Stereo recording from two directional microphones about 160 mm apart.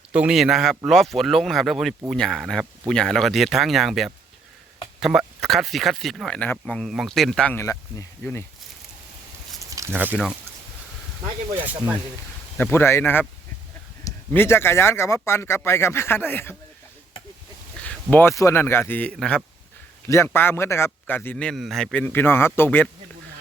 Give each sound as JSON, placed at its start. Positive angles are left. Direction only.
{"t": 0.1, "sound": "speech", "side_deg": -5}
{"t": 9.6, "sound": "speech", "side_deg": -20}
{"t": 11.5, "sound": "speech", "side_deg": -10}
{"t": 12.5, "sound": "a man's voice", "side_deg": 15}
{"t": 17.8, "sound": "a man's voice", "side_deg": 10}
{"t": 20.1, "sound": "a man's voice", "side_deg": 15}